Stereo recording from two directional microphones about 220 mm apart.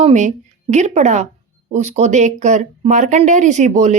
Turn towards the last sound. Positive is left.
turn(degrees=-30)  # may be behind; listen again after turning